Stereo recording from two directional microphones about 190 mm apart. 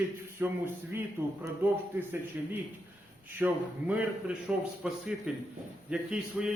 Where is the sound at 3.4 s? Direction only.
5° right (ahead or behind).